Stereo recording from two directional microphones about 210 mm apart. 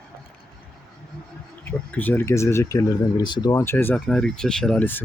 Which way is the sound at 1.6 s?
10° left (ahead or behind).